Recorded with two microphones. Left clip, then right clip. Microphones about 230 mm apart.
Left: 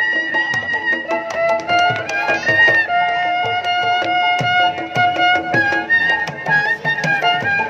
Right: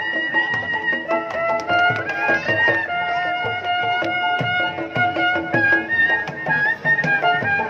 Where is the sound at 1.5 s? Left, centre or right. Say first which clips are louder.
Left 2 dB; left.